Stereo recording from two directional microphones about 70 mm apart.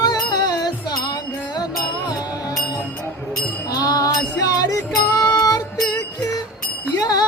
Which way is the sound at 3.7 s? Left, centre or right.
Left.